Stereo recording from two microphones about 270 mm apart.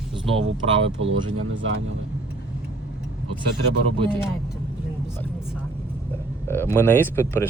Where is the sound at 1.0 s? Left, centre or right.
Right.